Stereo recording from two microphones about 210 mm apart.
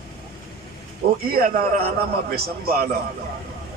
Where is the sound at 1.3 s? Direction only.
45° right (ahead or behind).